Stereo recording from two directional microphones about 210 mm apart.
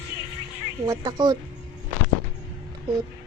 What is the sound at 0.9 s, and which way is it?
Speech, 20° right (ahead or behind).